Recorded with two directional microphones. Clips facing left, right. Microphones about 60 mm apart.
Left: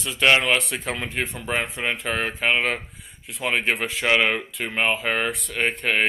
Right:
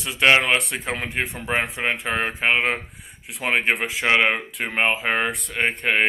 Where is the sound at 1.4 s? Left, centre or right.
Centre.